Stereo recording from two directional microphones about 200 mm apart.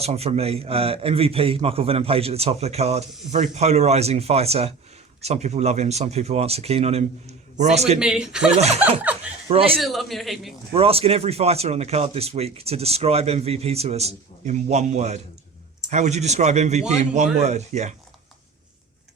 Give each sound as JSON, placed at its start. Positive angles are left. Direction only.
{"t": 0.0, "sound": "a man's voice", "side_deg": -30}
{"t": 7.9, "sound": "a man's voice", "side_deg": -5}
{"t": 8.5, "sound": "a man's voice", "side_deg": -30}
{"t": 9.8, "sound": "a man's voice", "side_deg": 0}
{"t": 10.7, "sound": "a man's voice", "side_deg": -30}